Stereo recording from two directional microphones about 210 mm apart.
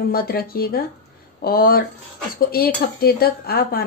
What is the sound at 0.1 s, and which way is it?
A woman's voice, 45° left (ahead or behind).